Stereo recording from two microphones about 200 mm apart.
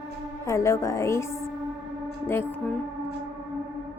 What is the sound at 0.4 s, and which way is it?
A woman's voice, 15° left (ahead or behind).